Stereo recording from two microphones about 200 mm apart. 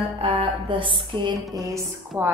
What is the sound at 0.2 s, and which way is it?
A woman's voice, 25° right (ahead or behind).